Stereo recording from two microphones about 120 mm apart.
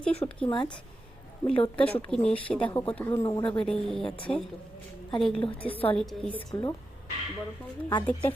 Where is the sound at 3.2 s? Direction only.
30° left (ahead or behind).